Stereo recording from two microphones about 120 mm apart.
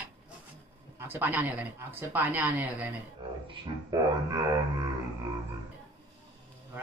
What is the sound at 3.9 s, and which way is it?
Didgeridoo, 30° right (ahead or behind).